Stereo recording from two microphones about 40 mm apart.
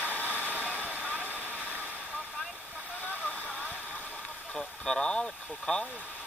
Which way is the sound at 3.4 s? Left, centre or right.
Left.